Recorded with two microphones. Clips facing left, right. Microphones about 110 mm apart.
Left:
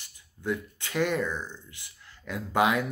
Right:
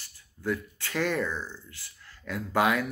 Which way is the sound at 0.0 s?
20° left (ahead or behind).